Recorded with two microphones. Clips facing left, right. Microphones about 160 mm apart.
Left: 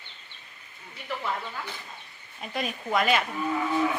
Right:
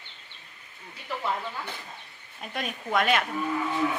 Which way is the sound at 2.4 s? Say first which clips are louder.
Left 2 dB; centre (ahead or behind).